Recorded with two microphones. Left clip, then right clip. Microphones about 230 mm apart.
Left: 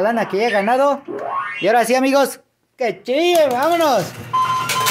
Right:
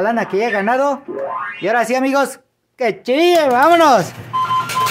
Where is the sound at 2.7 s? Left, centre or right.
Right.